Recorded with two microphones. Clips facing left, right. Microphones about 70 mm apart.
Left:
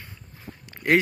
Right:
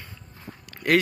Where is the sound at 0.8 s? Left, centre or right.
Right.